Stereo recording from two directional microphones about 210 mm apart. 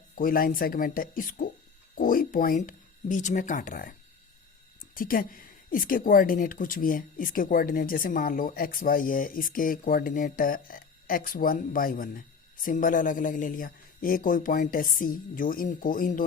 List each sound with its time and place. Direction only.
0.2 s a woman's voice: 45° left (ahead or behind)
4.9 s a woman's voice: 40° left (ahead or behind)